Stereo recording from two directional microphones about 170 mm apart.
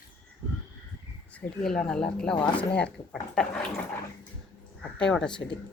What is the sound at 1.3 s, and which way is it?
Speech, 5° left (ahead or behind).